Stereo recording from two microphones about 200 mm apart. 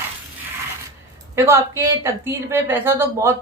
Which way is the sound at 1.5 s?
15° right (ahead or behind).